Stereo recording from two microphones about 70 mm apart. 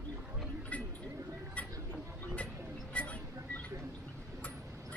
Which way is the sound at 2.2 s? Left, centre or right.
Left.